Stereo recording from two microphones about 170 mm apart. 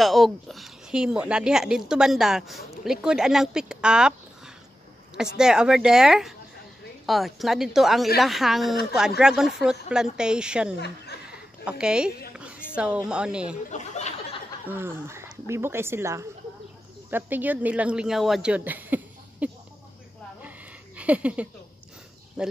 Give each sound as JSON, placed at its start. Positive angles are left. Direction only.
{"t": 0.0, "sound": "speech", "side_deg": 0}
{"t": 5.1, "sound": "speech", "side_deg": -5}
{"t": 11.2, "sound": "a sound", "side_deg": -5}
{"t": 12.7, "sound": "speech", "side_deg": -5}
{"t": 13.7, "sound": "speech", "side_deg": 45}
{"t": 14.7, "sound": "speech", "side_deg": -15}
{"t": 20.4, "sound": "a sound", "side_deg": -10}
{"t": 22.4, "sound": "speech", "side_deg": -5}